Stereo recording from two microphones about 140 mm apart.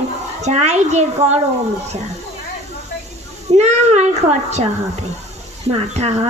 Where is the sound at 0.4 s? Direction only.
55° right (ahead or behind).